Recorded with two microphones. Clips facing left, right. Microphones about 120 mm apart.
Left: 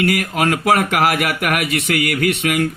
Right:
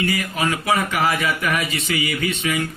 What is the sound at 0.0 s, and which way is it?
Speech, 80° left.